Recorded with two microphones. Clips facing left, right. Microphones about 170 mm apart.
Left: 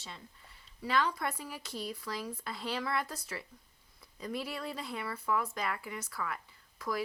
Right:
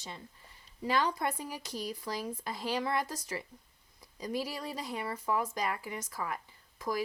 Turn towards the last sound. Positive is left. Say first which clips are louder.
# right 3 dB
turn(degrees=-20)  # may be behind; listen again after turning